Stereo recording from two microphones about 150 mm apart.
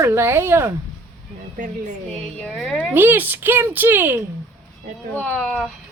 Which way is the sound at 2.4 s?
5° left (ahead or behind).